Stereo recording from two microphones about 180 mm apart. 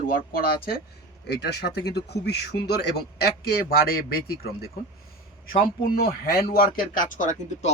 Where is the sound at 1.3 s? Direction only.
65° left (ahead or behind).